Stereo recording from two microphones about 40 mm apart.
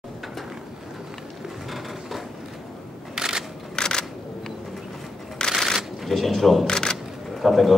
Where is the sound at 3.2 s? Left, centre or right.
Centre.